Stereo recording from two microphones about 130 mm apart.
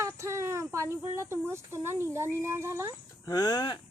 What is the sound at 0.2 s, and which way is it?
Speech, 25° right (ahead or behind).